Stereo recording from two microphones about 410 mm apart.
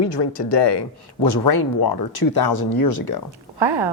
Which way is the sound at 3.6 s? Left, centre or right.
Right.